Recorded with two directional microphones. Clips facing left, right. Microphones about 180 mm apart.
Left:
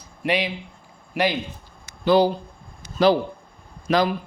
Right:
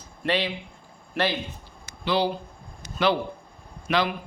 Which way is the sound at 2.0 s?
45° left (ahead or behind).